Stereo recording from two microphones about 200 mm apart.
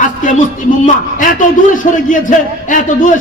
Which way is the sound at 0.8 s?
40° left (ahead or behind).